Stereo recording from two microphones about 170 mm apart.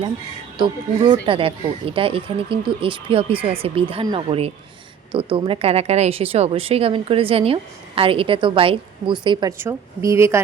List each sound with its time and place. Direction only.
0.6 s a woman's voice: 30° right (ahead or behind)